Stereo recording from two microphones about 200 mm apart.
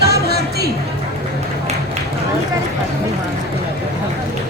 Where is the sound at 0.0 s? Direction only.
55° right (ahead or behind).